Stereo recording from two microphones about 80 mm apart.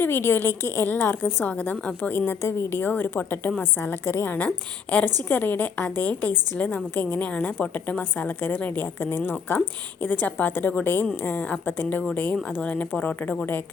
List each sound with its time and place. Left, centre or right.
0.0 s a woman's voice: left
4.4 s a woman's voice: centre